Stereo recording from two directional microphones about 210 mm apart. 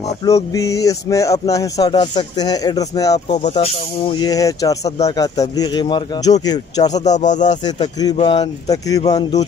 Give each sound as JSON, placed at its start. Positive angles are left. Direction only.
{"t": 0.2, "sound": "speech", "side_deg": 15}
{"t": 7.1, "sound": "speech", "side_deg": 35}
{"t": 7.6, "sound": "speech", "side_deg": 20}